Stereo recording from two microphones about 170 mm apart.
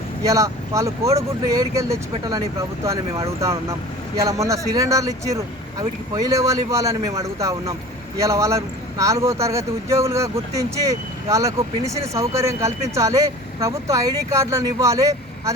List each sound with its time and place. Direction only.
0.3 s speech: 20° right (ahead or behind)
4.2 s speech: 20° right (ahead or behind)